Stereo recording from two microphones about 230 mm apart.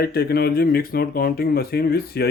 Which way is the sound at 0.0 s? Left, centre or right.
Left.